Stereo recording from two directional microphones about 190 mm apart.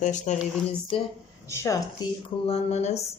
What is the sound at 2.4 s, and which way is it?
Speech, 35° left (ahead or behind).